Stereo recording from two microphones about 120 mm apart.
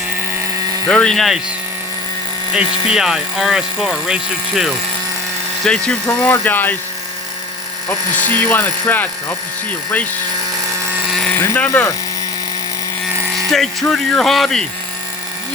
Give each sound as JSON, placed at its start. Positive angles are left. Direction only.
{"t": 0.9, "sound": "speech", "side_deg": 5}
{"t": 2.5, "sound": "speech", "side_deg": -5}
{"t": 5.6, "sound": "speech", "side_deg": 5}
{"t": 7.9, "sound": "speech", "side_deg": 15}
{"t": 11.1, "sound": "a sound", "side_deg": 5}
{"t": 11.3, "sound": "speech", "side_deg": 20}
{"t": 13.3, "sound": "speech", "side_deg": 0}